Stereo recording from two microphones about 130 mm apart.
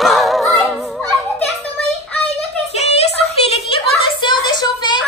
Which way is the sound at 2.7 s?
55° left (ahead or behind).